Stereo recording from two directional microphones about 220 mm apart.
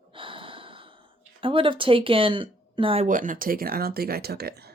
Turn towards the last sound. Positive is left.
turn(degrees=-45)  # may be behind; listen again after turning